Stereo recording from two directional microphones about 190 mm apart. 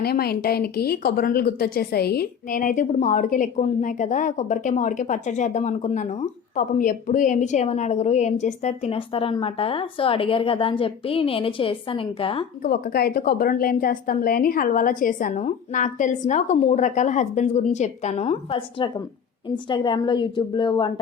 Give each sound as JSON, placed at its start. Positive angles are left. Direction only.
{"t": 0.0, "sound": "a woman's voice", "side_deg": 55}
{"t": 12.6, "sound": "a woman's voice", "side_deg": 50}